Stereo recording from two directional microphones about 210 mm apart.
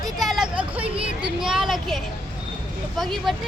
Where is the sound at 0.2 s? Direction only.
Centre (ahead or behind).